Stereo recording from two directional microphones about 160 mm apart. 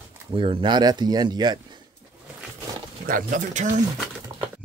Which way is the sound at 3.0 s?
55° right (ahead or behind).